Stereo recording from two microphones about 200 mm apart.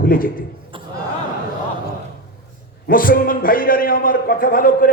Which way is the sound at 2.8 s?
45° left (ahead or behind).